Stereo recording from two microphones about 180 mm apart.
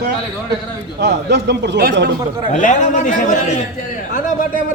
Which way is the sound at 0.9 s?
70° right (ahead or behind).